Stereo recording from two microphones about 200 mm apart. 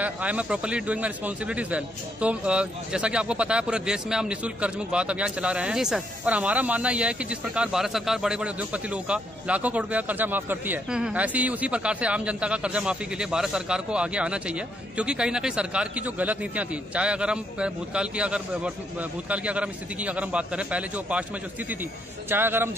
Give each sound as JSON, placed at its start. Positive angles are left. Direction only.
{"t": 0.0, "sound": "a man's voice", "side_deg": -5}